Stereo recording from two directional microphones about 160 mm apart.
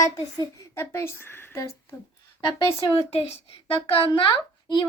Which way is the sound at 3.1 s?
40° left (ahead or behind).